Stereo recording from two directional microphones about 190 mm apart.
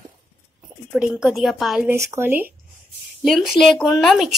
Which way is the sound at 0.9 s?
5° right (ahead or behind).